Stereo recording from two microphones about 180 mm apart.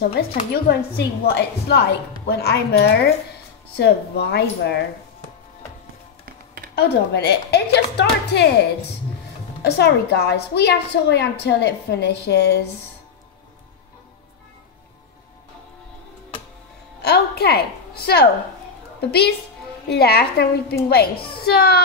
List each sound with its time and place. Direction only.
0.7 s a woman's voice: 65° left (ahead or behind)
6.2 s computer keyboard: 60° right (ahead or behind)
6.7 s a woman's voice: 65° left (ahead or behind)
9.6 s a woman's voice: 70° left (ahead or behind)
17.0 s a woman's voice: 65° left (ahead or behind)